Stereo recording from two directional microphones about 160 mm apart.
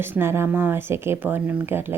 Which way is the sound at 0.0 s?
15° right (ahead or behind).